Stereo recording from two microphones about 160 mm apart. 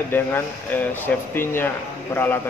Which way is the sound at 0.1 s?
15° left (ahead or behind).